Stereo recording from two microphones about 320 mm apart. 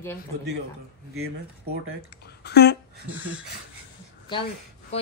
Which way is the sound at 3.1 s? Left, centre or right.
Centre.